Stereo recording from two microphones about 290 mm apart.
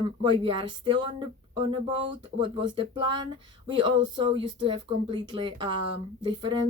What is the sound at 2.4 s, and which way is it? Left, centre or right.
Speech, centre.